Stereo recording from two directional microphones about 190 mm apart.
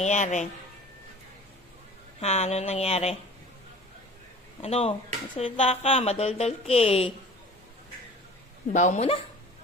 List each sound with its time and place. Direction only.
0.0 s speech: 40° left (ahead or behind)
2.2 s speech: 35° left (ahead or behind)
4.6 s speech: 30° left (ahead or behind)
8.7 s speech: 40° left (ahead or behind)